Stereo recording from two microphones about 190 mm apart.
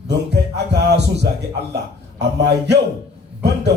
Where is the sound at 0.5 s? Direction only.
60° right (ahead or behind).